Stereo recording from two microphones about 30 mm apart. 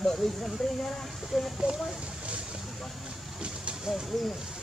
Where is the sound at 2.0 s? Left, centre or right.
Right.